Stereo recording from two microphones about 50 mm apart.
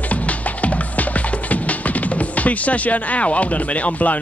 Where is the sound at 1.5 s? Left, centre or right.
Left.